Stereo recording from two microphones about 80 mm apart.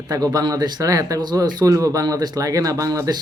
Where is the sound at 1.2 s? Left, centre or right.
Right.